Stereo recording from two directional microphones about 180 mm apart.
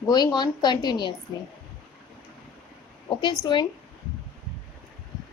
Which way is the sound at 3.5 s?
25° left (ahead or behind).